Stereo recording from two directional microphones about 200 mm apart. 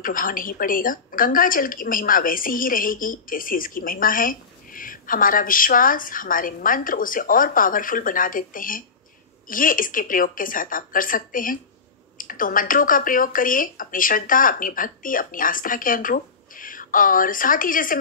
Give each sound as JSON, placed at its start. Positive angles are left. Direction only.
{"t": 0.0, "sound": "a woman's voice", "side_deg": 45}